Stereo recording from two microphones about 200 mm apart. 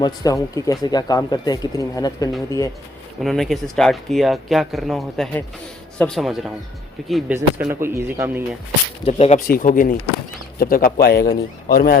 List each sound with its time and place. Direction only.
0.0 s speech: 20° left (ahead or behind)
3.2 s speech: centre (ahead or behind)
9.0 s speech: 30° left (ahead or behind)
9.5 s a man's voice: 40° left (ahead or behind)